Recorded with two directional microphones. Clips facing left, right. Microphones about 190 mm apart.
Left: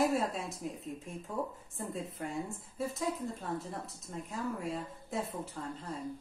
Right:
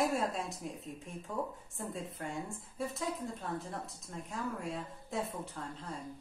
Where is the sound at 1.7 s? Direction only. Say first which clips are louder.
Left 2 dB; centre (ahead or behind).